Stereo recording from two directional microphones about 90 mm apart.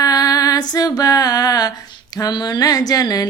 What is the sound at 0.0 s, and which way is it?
Female singing, 45° left (ahead or behind).